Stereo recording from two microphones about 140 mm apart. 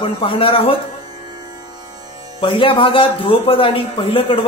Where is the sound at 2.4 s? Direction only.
40° left (ahead or behind).